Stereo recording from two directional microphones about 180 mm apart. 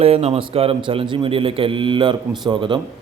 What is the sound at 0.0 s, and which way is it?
A man's voice, 35° right (ahead or behind).